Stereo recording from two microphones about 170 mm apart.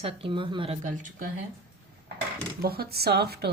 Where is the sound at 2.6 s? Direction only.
65° right (ahead or behind).